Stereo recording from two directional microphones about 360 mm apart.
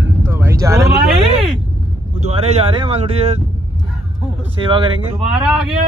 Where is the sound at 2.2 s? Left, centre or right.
Centre.